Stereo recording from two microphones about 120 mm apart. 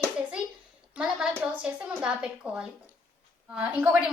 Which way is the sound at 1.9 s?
10° right (ahead or behind).